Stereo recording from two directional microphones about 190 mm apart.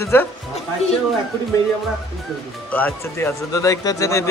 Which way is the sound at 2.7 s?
10° left (ahead or behind).